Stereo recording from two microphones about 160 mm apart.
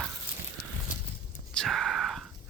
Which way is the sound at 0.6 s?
70° left (ahead or behind).